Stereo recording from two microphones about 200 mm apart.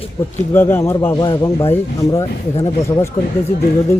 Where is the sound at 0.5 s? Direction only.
10° left (ahead or behind).